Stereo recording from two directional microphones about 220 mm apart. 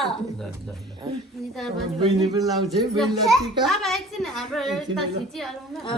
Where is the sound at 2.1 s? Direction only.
15° right (ahead or behind).